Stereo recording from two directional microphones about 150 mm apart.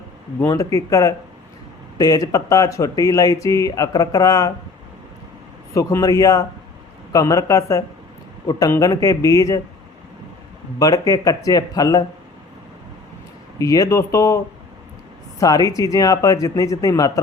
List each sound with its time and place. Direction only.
0.4 s speech: 20° left (ahead or behind)
5.7 s speech: 20° left (ahead or behind)
10.8 s speech: 25° left (ahead or behind)
13.6 s speech: 20° left (ahead or behind)